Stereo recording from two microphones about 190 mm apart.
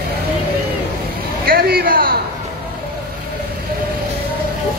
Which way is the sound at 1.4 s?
50° right (ahead or behind).